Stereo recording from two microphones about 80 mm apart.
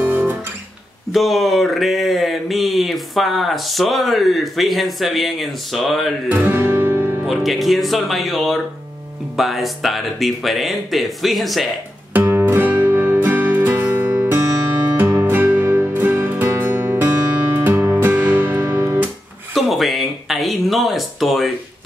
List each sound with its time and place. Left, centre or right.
0.0 s guitar: right
1.1 s speech: centre
6.3 s music: right
7.2 s speech: centre
12.1 s music: right
19.5 s a sound: centre